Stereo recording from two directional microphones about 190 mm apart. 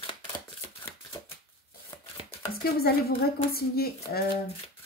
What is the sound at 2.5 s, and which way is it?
Speech, 55° left (ahead or behind).